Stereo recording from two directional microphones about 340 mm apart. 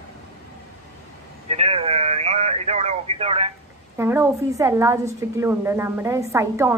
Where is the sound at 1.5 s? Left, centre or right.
Centre.